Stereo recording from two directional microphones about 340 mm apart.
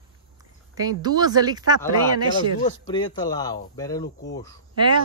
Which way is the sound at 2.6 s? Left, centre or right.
Centre.